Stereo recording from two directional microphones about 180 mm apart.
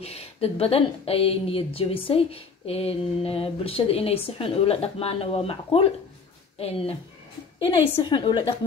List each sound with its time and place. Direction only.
0.0 s a woman's voice: 35° left (ahead or behind)
8.0 s a woman's voice: 25° left (ahead or behind)